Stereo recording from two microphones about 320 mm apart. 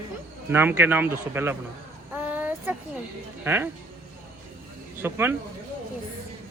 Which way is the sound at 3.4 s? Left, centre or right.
Centre.